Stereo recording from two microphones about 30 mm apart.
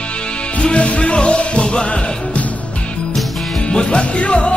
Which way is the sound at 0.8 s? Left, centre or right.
Left.